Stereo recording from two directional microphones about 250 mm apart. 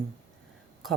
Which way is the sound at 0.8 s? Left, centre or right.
Centre.